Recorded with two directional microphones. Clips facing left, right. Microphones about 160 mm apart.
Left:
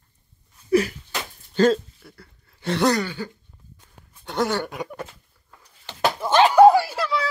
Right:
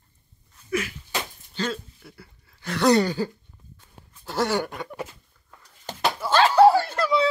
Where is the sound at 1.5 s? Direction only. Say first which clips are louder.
Left 12 dB; 45° left (ahead or behind).